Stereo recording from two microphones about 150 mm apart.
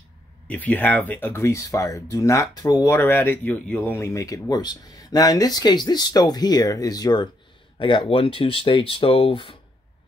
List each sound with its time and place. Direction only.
0.5 s speech: 10° left (ahead or behind); by 9.6 s 40° left (ahead or behind)